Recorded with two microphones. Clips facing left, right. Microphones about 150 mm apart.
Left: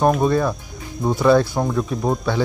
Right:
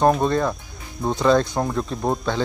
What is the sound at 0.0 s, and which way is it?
Speech, 5° left (ahead or behind).